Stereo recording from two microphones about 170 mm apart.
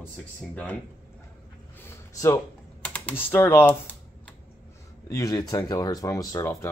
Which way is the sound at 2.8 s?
10° left (ahead or behind).